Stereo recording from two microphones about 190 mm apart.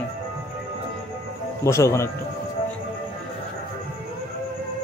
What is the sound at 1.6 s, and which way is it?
Speech, 15° left (ahead or behind).